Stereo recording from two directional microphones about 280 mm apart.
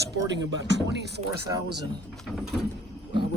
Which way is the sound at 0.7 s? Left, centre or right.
Right.